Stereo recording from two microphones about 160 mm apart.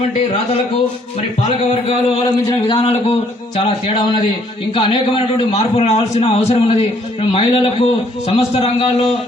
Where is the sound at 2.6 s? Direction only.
35° left (ahead or behind).